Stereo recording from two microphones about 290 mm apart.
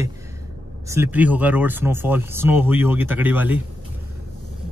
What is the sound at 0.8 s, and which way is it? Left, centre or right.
Speech, centre.